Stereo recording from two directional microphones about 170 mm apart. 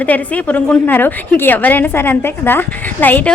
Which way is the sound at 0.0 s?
10° left (ahead or behind).